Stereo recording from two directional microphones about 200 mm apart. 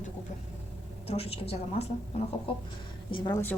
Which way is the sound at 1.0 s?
30° left (ahead or behind).